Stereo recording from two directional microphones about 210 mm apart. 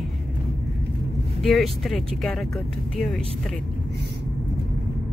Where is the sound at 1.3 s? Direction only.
Centre (ahead or behind).